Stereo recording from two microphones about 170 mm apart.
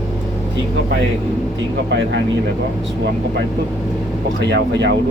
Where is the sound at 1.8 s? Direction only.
90° right.